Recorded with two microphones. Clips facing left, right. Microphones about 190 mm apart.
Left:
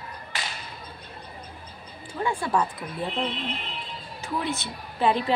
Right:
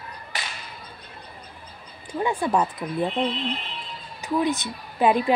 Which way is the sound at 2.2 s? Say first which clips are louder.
Right 3 dB; 20° right (ahead or behind).